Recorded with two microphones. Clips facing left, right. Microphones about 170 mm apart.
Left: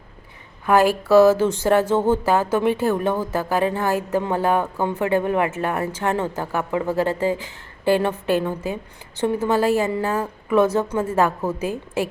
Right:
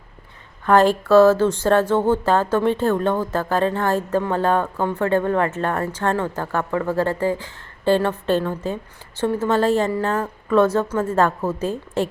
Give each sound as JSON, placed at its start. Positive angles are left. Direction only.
{"t": 0.6, "sound": "speech", "side_deg": 10}